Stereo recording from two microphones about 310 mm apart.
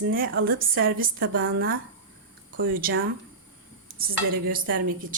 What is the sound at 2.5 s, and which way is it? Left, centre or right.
Speech, right.